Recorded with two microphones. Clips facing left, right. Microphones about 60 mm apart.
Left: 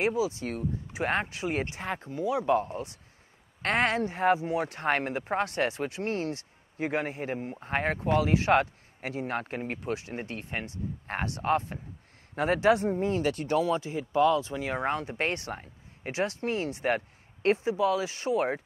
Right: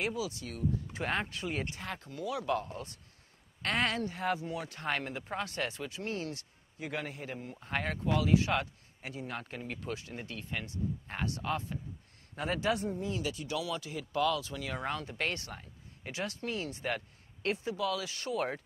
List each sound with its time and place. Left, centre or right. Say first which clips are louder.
0.0 s speech: left 8 dB; left